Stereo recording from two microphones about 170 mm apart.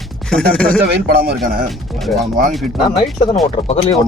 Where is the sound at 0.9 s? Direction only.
70° right (ahead or behind).